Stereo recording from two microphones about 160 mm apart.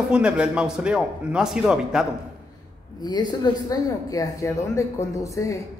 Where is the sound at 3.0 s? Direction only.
25° left (ahead or behind).